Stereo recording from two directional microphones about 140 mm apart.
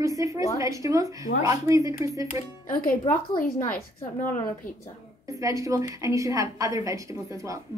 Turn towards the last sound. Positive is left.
turn(degrees=-25)  # may be behind; listen again after turning